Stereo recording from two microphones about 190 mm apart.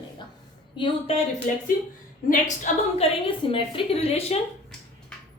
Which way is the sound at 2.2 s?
40° left (ahead or behind).